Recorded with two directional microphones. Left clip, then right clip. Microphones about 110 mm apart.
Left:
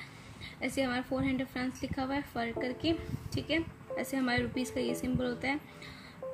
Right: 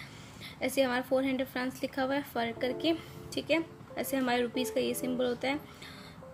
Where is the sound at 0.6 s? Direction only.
45° right (ahead or behind).